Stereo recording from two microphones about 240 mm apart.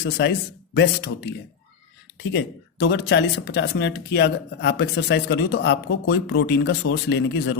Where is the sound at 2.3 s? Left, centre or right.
Left.